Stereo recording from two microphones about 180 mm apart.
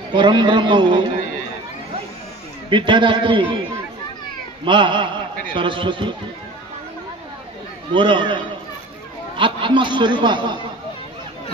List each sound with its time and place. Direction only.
0.1 s speech: 25° right (ahead or behind)
2.7 s speech: 25° right (ahead or behind)
4.6 s a man's voice: 25° right (ahead or behind)
7.9 s speech: 25° right (ahead or behind)
9.4 s speech: 25° right (ahead or behind)